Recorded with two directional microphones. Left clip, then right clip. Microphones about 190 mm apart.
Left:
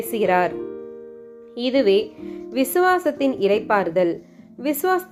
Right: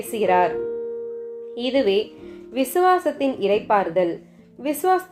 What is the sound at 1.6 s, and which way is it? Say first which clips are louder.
A woman's voice: left 2 dB; 30° left (ahead or behind).